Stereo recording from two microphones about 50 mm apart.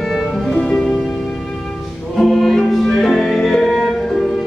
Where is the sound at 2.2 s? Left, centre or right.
Centre.